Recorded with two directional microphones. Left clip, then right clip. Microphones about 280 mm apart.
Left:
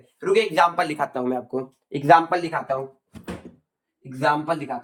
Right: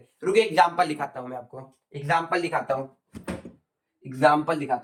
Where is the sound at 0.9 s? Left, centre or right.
Left.